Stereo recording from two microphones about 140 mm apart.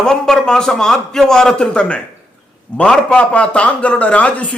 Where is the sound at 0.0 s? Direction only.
5° left (ahead or behind).